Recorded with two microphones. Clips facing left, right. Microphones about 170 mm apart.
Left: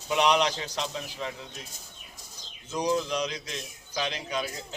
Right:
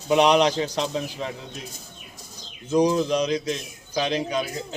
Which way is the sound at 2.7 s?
35° right (ahead or behind).